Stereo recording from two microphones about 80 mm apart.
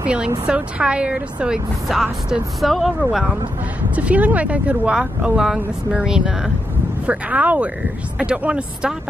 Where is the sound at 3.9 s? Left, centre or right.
Centre.